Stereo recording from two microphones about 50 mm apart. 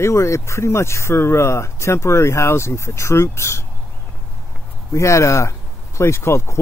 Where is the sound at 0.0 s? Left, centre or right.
Left.